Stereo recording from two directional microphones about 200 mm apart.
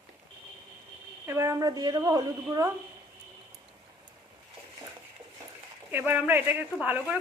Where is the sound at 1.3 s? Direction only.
15° right (ahead or behind).